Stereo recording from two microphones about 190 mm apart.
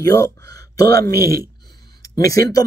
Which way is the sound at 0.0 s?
15° left (ahead or behind).